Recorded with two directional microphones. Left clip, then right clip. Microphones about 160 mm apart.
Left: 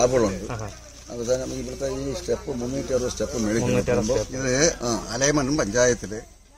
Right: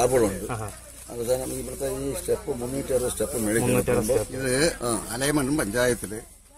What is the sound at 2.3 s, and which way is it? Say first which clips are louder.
Speech: even; 5° right (ahead or behind).